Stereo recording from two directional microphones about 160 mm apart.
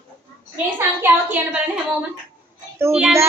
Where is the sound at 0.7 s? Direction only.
10° right (ahead or behind).